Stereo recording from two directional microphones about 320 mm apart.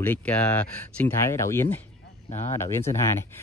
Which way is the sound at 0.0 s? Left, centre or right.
Centre.